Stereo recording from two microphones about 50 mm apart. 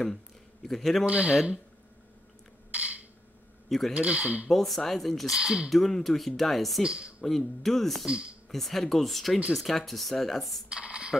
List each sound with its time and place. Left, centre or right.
0.0 s a man's voice: centre
1.0 s speech: right
2.7 s a sound: right
3.6 s speech: centre
3.9 s speech: right
4.5 s speech: centre
5.3 s speech: centre
5.7 s speech: centre
6.8 s speech: centre
7.2 s speech: centre
8.0 s speech: centre
8.5 s speech: centre
10.7 s a sound: right